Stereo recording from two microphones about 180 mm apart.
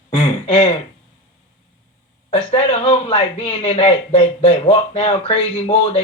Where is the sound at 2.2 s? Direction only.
30° left (ahead or behind).